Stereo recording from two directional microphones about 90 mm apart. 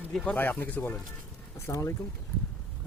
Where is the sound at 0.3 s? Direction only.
20° left (ahead or behind).